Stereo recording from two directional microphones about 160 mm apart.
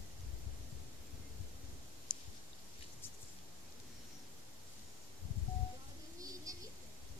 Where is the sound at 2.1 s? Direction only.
60° right (ahead or behind).